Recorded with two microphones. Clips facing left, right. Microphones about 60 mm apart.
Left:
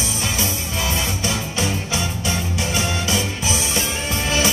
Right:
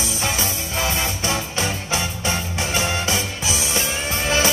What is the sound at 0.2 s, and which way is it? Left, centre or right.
Music, right.